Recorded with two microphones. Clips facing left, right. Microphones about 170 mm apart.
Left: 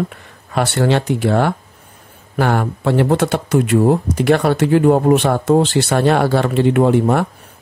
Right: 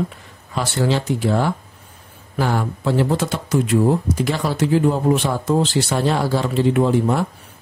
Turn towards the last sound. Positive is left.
turn(degrees=65)  # may be behind; listen again after turning